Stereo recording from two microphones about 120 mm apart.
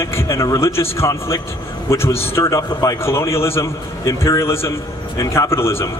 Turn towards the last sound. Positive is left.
turn(degrees=20)  # may be behind; listen again after turning